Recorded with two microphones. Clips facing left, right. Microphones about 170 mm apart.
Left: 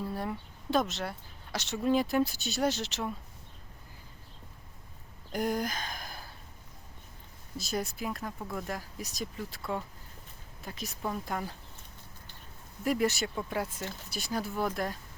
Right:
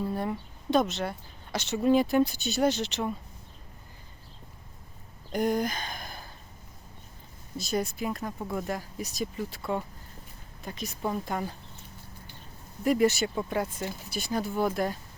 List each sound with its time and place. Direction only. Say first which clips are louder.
0.0 s speech: right 4 dB; centre (ahead or behind)
5.3 s speech: right 4 dB; centre (ahead or behind)
7.6 s speech: right 4 dB; centre (ahead or behind)
12.8 s speech: right 5 dB; centre (ahead or behind)